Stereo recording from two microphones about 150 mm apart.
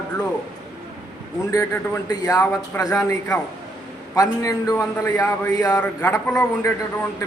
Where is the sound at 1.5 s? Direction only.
20° left (ahead or behind).